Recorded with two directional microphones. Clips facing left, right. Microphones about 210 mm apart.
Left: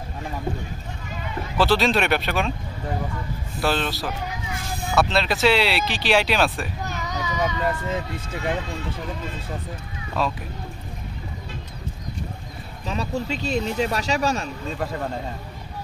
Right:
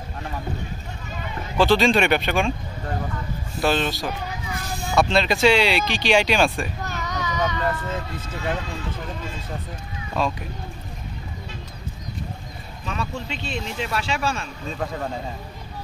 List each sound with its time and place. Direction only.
1.6 s speech: centre (ahead or behind)
3.6 s speech: centre (ahead or behind)
10.2 s speech: 5° left (ahead or behind)
12.8 s speech: 35° left (ahead or behind)
14.7 s speech: centre (ahead or behind)